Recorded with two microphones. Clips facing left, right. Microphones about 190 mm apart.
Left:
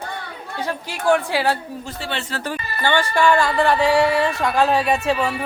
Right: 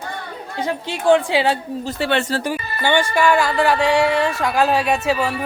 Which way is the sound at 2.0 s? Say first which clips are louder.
Right 10 dB; 60° right (ahead or behind).